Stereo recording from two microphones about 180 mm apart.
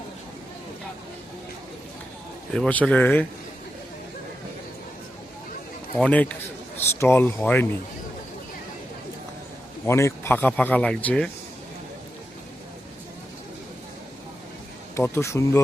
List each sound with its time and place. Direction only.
2.5 s speech: 5° left (ahead or behind)
6.0 s speech: 5° left (ahead or behind)
9.8 s speech: 15° left (ahead or behind)
14.9 s speech: 15° left (ahead or behind)